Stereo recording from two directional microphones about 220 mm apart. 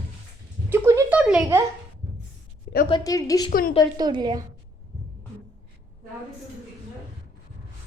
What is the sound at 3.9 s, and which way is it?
Speech, 20° right (ahead or behind).